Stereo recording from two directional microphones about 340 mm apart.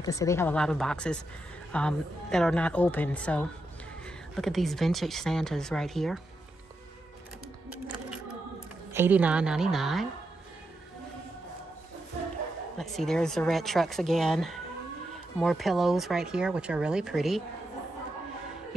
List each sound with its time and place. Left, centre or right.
0.0 s speech: centre
8.9 s speech: centre
12.7 s speech: centre